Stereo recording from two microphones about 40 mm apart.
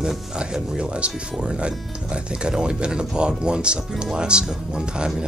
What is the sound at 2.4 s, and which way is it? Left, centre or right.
Speech, right.